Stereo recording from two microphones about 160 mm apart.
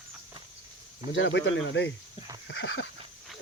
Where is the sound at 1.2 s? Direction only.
90° left.